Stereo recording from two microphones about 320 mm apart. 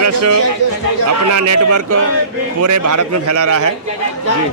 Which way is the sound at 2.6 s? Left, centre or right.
Right.